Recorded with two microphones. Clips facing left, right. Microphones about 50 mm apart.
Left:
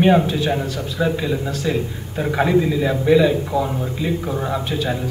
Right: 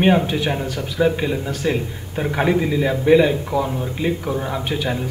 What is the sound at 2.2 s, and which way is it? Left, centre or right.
A man's voice, right.